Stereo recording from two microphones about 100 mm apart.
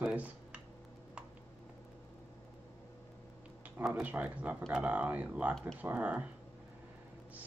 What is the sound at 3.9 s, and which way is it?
Speech, 15° right (ahead or behind).